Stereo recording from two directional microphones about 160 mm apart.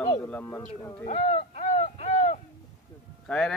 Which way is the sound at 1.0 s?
40° left (ahead or behind).